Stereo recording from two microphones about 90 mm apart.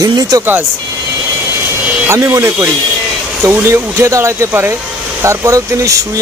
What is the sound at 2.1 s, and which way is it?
Speech, 35° right (ahead or behind).